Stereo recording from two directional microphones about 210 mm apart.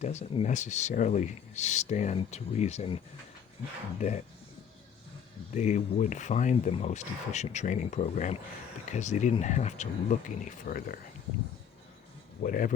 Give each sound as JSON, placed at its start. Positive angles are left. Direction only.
{"t": 0.0, "sound": "speech", "side_deg": 30}
{"t": 5.5, "sound": "speech", "side_deg": 35}
{"t": 12.4, "sound": "speech", "side_deg": 40}